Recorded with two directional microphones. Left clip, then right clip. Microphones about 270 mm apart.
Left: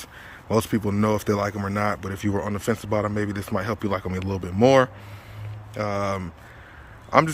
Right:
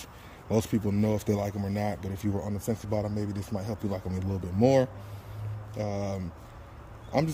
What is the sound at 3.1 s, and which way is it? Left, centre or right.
Speech, centre.